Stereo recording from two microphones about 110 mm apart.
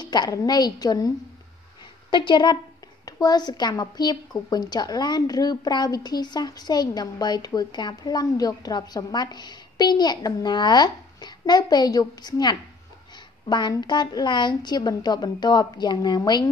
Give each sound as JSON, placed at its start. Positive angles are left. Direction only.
{"t": 0.0, "sound": "a woman's voice", "side_deg": 40}